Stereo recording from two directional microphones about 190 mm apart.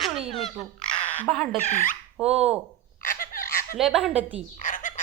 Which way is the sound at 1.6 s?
40° left (ahead or behind).